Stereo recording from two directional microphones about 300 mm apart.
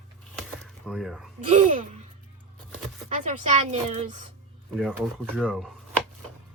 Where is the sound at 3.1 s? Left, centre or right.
Right.